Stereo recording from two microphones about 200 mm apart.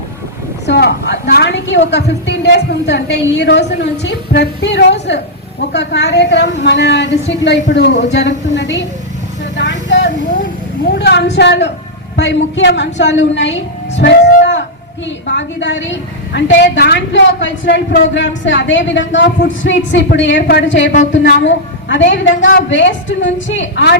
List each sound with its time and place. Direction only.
0.7 s a woman's voice: 60° left (ahead or behind)
9.6 s vehicle: 65° left (ahead or behind)
10.8 s a woman's voice: 55° left (ahead or behind)
15.3 s a woman's voice: 65° left (ahead or behind)